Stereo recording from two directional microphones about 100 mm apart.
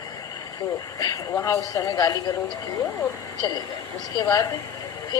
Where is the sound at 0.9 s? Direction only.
35° left (ahead or behind).